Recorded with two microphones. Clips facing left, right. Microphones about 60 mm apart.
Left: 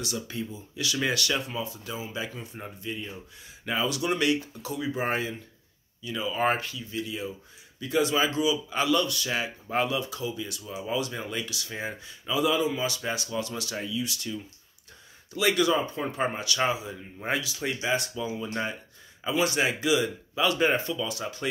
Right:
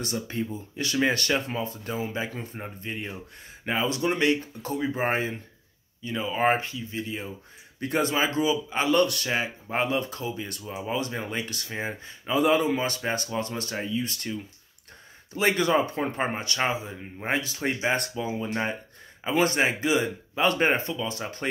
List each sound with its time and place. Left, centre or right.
0.0 s speech: right
3.6 s speech: right
7.8 s speech: right
8.1 s speech: right
8.5 s speech: right
8.9 s speech: right
9.3 s speech: right
9.9 s speech: right
11.7 s speech: right
15.7 s speech: right
16.0 s speech: right
18.1 s speech: right